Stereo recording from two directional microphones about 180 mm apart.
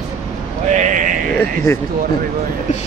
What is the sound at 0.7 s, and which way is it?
Speech, 45° right (ahead or behind).